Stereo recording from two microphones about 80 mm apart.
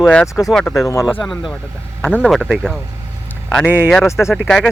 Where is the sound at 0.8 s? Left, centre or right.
Left.